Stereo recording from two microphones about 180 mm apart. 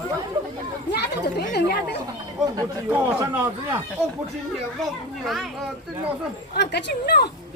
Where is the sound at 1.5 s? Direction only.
65° left (ahead or behind).